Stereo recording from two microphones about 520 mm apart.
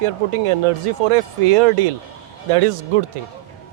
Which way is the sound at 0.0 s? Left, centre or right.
Right.